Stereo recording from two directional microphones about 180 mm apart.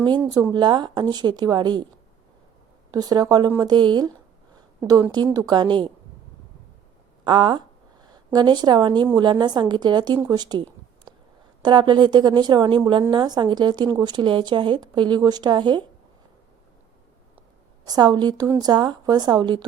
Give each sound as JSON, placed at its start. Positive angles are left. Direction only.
{"t": 0.3, "sound": "speech", "side_deg": -20}
{"t": 2.9, "sound": "speech", "side_deg": -20}
{"t": 7.3, "sound": "a woman's voice", "side_deg": -25}
{"t": 17.8, "sound": "speech", "side_deg": -20}